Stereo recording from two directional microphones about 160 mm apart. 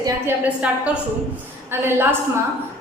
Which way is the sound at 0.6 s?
10° right (ahead or behind).